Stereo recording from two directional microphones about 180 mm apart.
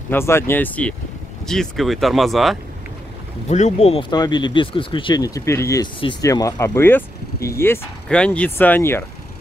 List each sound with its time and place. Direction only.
0.1 s speech: 15° left (ahead or behind)
3.4 s speech: 40° left (ahead or behind); by 9.0 s 10° left (ahead or behind)